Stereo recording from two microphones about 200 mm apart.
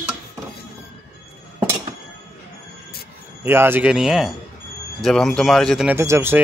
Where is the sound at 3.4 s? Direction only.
10° right (ahead or behind).